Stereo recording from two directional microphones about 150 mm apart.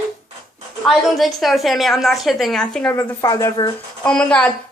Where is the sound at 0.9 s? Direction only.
Centre (ahead or behind).